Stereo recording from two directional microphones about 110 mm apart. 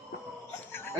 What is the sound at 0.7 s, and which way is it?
Chuckle, 20° left (ahead or behind).